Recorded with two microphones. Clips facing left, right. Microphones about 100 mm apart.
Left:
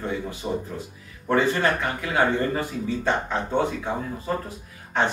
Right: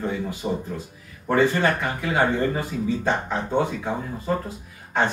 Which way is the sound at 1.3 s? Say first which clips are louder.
Right 1 dB; 20° right (ahead or behind).